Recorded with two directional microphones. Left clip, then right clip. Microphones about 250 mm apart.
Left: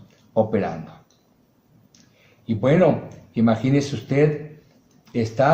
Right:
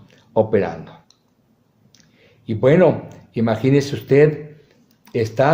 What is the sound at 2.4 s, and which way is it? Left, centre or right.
Speech, right.